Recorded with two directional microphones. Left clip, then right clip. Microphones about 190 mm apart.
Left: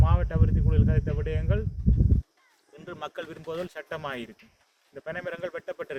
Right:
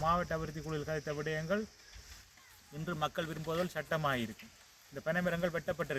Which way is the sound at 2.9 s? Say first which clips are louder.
Even; 50° left (ahead or behind).